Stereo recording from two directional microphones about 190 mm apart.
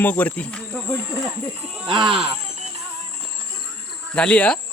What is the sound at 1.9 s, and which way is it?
Speech, 25° right (ahead or behind).